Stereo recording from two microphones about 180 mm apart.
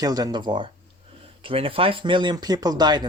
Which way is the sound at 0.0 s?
20° right (ahead or behind).